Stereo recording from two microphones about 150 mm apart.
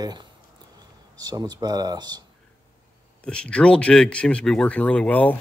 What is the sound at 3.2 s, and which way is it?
Speech, 5° left (ahead or behind).